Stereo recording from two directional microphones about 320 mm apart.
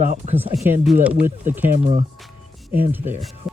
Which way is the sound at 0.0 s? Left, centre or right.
Right.